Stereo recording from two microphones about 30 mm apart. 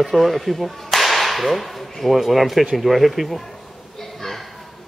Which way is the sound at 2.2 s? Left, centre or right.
Centre.